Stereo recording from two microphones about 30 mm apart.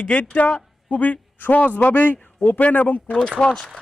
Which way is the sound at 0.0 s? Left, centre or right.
Left.